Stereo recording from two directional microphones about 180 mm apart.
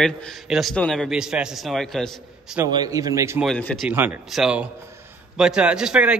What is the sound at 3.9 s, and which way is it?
A man's voice, 10° right (ahead or behind).